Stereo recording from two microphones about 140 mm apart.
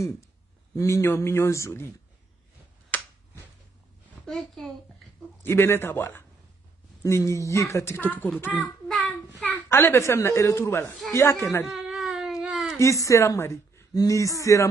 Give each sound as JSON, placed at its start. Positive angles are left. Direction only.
{"t": 0.7, "sound": "speech", "side_deg": 20}
{"t": 2.9, "sound": "finger snapping", "side_deg": 15}
{"t": 4.3, "sound": "a child's voice", "side_deg": 0}
{"t": 5.4, "sound": "a man's voice", "side_deg": 15}
{"t": 11.6, "sound": "baby cry", "side_deg": 0}
{"t": 12.7, "sound": "speech", "side_deg": 20}